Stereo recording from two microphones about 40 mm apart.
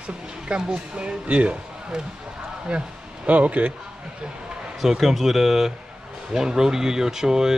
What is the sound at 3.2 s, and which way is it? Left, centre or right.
Speech, right.